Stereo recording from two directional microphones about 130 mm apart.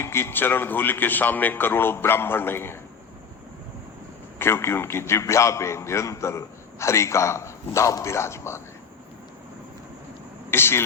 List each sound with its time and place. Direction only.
0.0 s a man's voice: 20° left (ahead or behind)
4.4 s a man's voice: 20° left (ahead or behind)
10.5 s a man's voice: 20° left (ahead or behind)